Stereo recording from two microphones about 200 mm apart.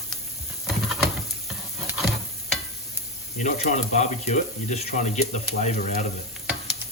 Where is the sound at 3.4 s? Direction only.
35° left (ahead or behind).